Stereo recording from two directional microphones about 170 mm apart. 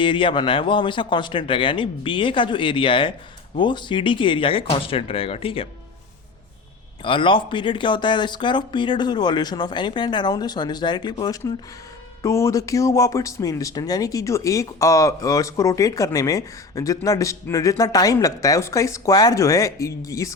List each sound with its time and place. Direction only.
0.0 s speech: 30° left (ahead or behind)
7.0 s speech: 30° left (ahead or behind)